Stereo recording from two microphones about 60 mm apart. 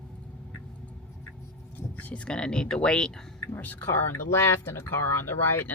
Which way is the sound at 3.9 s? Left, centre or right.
Left.